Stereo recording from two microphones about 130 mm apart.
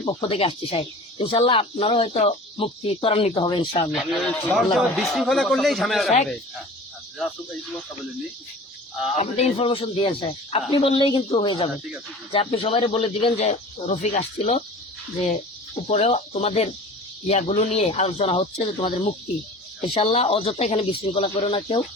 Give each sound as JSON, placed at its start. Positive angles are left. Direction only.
{"t": 0.1, "sound": "speech", "side_deg": 40}
{"t": 3.9, "sound": "speech", "side_deg": 0}
{"t": 7.2, "sound": "speech", "side_deg": 0}
{"t": 9.1, "sound": "a woman's voice", "side_deg": 55}
{"t": 15.9, "sound": "speech", "side_deg": 60}